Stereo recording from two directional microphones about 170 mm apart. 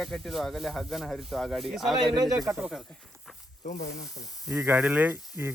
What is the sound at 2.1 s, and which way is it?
Speech, 20° right (ahead or behind).